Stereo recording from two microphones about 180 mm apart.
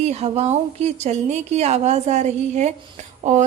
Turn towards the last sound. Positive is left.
turn(degrees=-40)  # may be behind; listen again after turning